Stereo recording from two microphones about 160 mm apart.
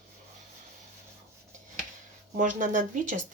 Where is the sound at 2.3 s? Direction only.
55° right (ahead or behind).